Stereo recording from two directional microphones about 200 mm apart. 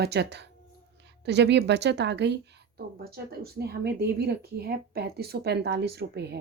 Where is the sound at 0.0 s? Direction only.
55° right (ahead or behind).